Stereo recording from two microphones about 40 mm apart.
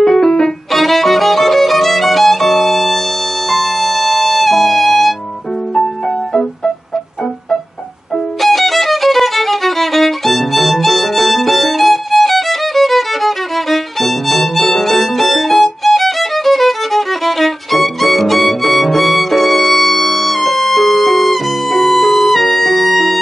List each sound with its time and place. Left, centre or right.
0.0 s violin: centre
3.4 s music: centre
8.4 s music: centre